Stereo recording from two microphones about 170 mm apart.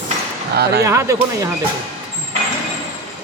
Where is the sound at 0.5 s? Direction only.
70° right (ahead or behind).